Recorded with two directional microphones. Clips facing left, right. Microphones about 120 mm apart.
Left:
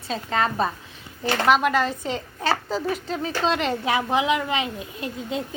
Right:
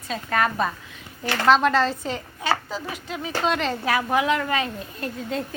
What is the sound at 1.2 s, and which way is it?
Speech, 15° left (ahead or behind).